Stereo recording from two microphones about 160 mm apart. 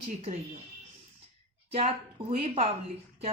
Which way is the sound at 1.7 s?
40° right (ahead or behind).